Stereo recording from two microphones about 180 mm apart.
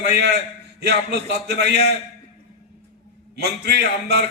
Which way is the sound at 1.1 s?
65° right (ahead or behind).